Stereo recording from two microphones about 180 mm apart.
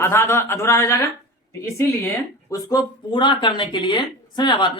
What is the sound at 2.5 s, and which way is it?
Speech, 20° left (ahead or behind).